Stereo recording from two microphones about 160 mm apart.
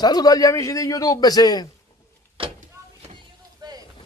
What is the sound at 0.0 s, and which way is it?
A man's voice, 25° left (ahead or behind).